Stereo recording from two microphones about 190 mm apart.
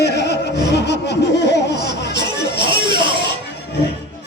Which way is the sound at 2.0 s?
65° left (ahead or behind).